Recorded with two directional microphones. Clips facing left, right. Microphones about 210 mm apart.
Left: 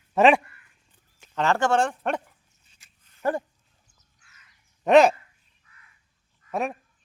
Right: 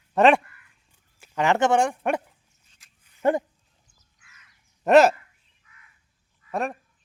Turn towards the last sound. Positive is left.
turn(degrees=0)  # may be behind; listen again after turning